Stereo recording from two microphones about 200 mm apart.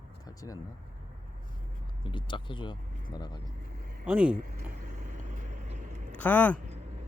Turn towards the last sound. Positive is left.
turn(degrees=10)  # may be behind; listen again after turning